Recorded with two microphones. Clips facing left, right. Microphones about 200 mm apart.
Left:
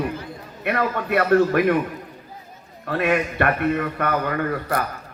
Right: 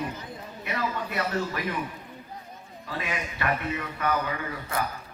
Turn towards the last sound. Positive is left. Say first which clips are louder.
# left 8 dB
turn(degrees=60)  # may be behind; listen again after turning